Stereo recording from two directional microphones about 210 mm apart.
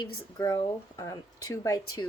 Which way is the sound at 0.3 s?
15° left (ahead or behind).